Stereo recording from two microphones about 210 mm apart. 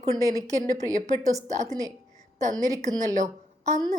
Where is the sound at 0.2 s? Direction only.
15° right (ahead or behind).